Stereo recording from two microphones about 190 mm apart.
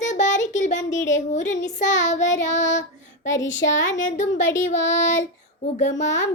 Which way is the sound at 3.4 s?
75° left (ahead or behind).